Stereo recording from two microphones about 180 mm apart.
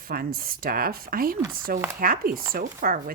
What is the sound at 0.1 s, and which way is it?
Speech, 55° right (ahead or behind).